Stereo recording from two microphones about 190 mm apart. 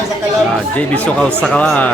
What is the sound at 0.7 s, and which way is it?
Speech, 5° left (ahead or behind).